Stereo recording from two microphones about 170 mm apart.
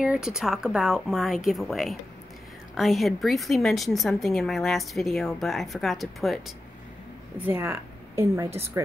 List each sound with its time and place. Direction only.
0.0 s a woman's voice: 5° right (ahead or behind)
7.4 s speech: 15° right (ahead or behind)